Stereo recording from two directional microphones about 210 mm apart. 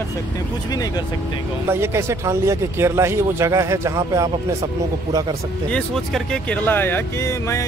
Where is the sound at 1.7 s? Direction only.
10° right (ahead or behind).